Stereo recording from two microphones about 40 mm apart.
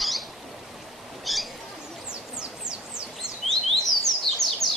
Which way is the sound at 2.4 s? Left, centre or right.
Right.